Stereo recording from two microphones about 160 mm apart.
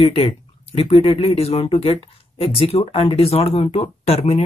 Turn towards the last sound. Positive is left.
turn(degrees=40)  # may be behind; listen again after turning